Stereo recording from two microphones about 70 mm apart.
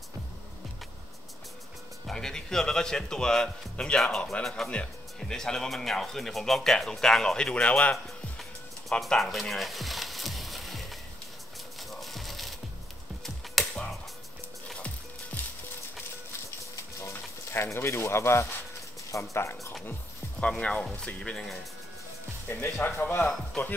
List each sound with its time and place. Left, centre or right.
2.0 s speech: centre
7.9 s music: centre
9.0 s frying: centre
12.0 s horse: centre
13.2 s music: centre
15.3 s music: left
17.0 s a sound: left
19.3 s speech: left
19.9 s music: centre
20.5 s speech: centre
22.5 s speech: left
23.2 s speech: centre